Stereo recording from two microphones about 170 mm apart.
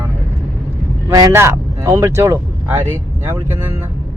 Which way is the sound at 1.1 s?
20° right (ahead or behind).